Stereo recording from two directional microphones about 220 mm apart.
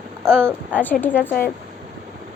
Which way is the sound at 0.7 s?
10° left (ahead or behind).